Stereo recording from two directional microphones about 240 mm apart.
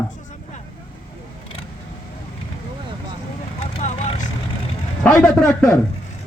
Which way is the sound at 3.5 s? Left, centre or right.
Left.